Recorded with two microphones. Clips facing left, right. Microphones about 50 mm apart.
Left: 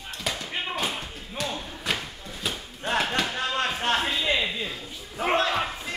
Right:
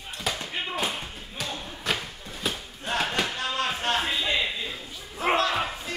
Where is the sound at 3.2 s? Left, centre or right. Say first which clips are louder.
Left 1 dB; left.